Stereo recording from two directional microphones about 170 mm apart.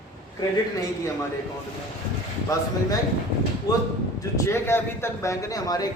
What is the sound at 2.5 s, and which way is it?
Speech, 20° left (ahead or behind).